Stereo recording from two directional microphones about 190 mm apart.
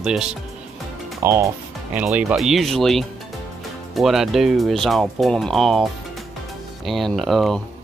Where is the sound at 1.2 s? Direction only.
15° right (ahead or behind); by 7.6 s centre (ahead or behind).